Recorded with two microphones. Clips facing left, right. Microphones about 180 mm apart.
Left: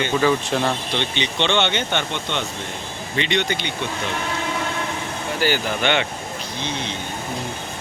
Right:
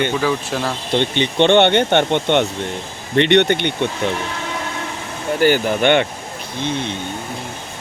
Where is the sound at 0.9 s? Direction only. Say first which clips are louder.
Right 7 dB; 50° right (ahead or behind).